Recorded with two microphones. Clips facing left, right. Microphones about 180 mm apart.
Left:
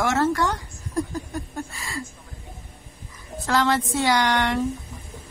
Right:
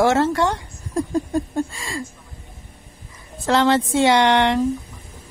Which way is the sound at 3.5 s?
25° right (ahead or behind).